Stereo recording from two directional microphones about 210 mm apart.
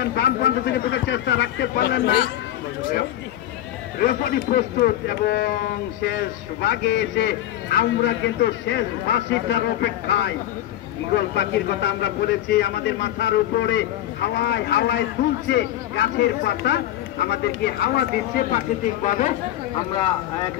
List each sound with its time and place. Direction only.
0.0 s a man's voice: 50° left (ahead or behind)
4.0 s a man's voice: 45° left (ahead or behind)
19.0 s speech: 40° left (ahead or behind)
19.9 s speech: 20° left (ahead or behind)